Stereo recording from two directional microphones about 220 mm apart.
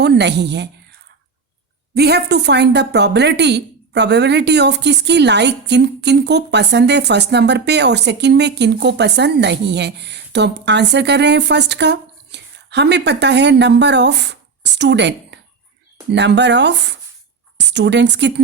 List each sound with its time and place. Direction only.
0.0 s a woman's voice: 50° right (ahead or behind)
2.0 s a woman's voice: 50° right (ahead or behind)